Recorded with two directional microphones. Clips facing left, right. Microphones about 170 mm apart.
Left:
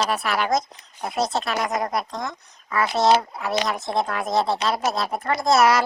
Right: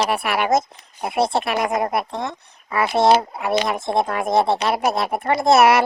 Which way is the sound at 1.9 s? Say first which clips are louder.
Right 3 dB; 60° right (ahead or behind).